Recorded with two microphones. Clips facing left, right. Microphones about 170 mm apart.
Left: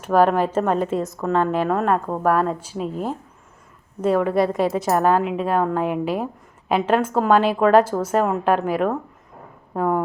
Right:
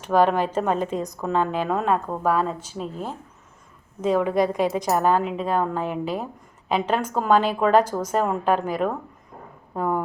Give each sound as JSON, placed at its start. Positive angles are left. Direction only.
{"t": 0.0, "sound": "speech", "side_deg": 5}
{"t": 2.3, "sound": "a woman's voice", "side_deg": 55}
{"t": 2.7, "sound": "speech", "side_deg": 5}